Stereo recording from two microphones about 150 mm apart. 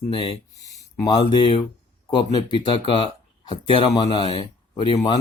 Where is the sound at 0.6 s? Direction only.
20° left (ahead or behind).